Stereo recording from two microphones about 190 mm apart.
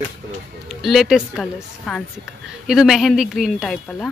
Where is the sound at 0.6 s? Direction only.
Centre (ahead or behind).